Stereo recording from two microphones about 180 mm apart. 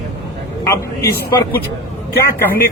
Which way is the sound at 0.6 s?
15° left (ahead or behind).